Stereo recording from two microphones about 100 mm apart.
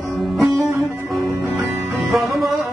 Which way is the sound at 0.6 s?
30° right (ahead or behind).